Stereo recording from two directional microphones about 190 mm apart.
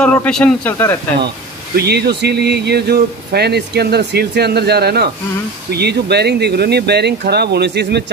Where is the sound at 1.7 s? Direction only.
60° right (ahead or behind).